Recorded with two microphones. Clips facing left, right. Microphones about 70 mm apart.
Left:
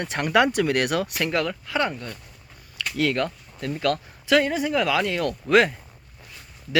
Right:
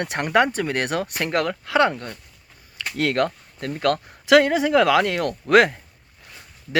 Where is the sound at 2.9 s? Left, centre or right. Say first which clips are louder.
Right 2 dB; right.